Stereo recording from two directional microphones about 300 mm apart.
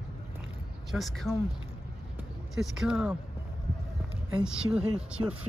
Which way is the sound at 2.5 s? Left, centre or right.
Centre.